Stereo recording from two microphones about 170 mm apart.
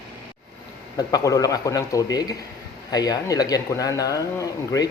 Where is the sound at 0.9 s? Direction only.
20° left (ahead or behind).